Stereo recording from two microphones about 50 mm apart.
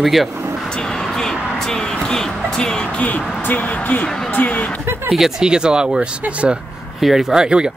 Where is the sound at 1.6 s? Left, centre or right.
Centre.